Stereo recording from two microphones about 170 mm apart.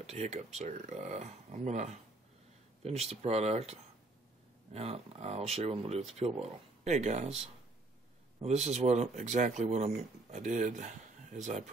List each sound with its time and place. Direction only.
0.0 s speech: 40° right (ahead or behind)
4.7 s speech: 35° right (ahead or behind)
8.4 s speech: 40° right (ahead or behind)